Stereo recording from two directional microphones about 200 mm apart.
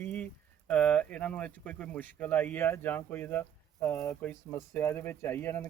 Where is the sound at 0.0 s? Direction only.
10° left (ahead or behind).